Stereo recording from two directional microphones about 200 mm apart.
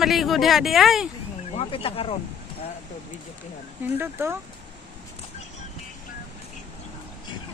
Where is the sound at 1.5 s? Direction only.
30° left (ahead or behind).